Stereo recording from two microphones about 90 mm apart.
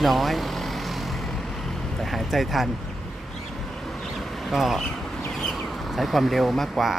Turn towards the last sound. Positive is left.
turn(degrees=0)  # may be behind; listen again after turning